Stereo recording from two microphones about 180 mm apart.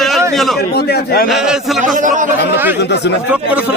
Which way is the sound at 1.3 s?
Centre (ahead or behind).